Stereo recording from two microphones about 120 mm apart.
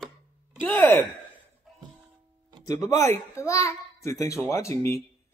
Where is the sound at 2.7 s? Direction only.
30° left (ahead or behind).